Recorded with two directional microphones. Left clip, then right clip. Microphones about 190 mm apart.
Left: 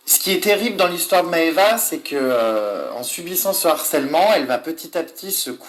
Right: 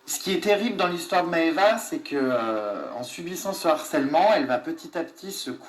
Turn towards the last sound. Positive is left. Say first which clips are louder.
# left 7 dB
turn(degrees=50)  # may be behind; listen again after turning